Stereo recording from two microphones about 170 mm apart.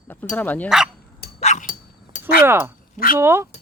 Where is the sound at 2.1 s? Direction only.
50° left (ahead or behind).